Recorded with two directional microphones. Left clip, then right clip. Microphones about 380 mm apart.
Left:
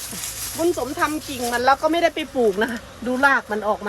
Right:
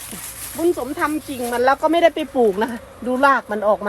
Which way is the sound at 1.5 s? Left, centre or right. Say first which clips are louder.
Right 1 dB; right.